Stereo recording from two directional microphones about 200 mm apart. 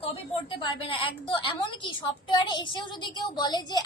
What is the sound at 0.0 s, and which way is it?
A woman's voice, 25° left (ahead or behind).